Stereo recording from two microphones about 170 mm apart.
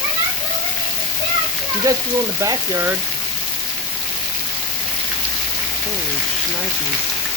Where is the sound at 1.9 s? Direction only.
20° right (ahead or behind).